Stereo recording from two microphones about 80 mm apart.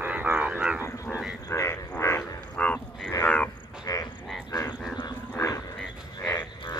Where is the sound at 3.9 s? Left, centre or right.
Left.